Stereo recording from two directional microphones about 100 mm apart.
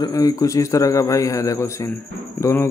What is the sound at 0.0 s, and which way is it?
Speech, 35° left (ahead or behind).